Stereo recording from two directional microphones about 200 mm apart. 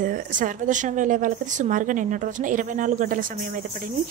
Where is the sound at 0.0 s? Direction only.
40° right (ahead or behind).